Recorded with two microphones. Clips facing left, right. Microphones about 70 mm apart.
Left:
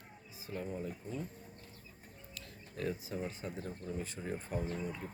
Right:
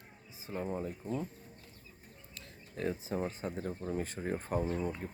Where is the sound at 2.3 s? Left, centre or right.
Right.